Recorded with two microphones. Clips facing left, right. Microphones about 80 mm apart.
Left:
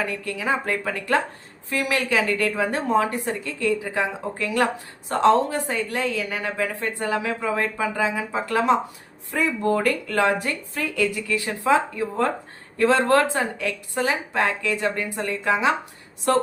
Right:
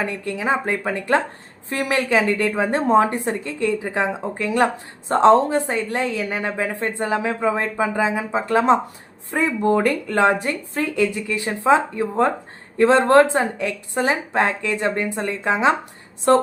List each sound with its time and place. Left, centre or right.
0.0 s a woman's voice: right